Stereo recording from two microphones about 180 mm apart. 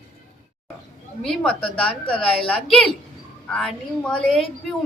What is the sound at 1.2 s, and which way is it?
Speech, 5° left (ahead or behind).